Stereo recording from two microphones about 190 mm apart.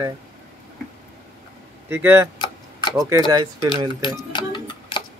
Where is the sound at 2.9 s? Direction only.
20° right (ahead or behind).